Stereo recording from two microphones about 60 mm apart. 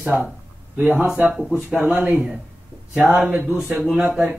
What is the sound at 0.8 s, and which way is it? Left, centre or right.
Speech, right.